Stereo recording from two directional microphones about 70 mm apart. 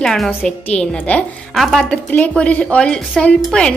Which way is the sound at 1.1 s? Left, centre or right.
Left.